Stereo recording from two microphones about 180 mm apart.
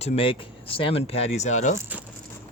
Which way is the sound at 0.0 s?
35° left (ahead or behind).